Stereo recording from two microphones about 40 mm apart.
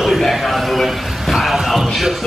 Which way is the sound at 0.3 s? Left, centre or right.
Centre.